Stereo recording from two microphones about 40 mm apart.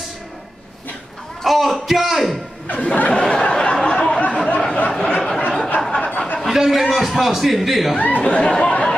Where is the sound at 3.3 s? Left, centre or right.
Centre.